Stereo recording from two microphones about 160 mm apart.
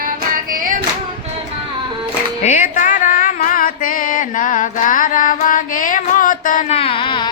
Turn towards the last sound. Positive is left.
turn(degrees=30)  # may be behind; listen again after turning